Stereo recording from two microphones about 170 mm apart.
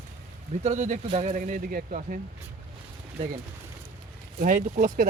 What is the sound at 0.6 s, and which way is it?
Speech, 45° right (ahead or behind).